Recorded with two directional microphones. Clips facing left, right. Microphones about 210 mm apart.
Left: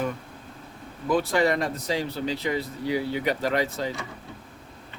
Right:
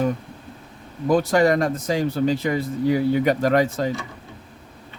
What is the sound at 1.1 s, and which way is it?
Speech, 45° right (ahead or behind).